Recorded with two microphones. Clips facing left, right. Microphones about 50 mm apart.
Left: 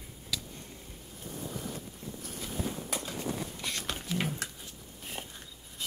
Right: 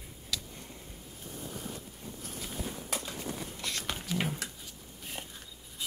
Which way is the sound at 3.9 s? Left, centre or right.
Centre.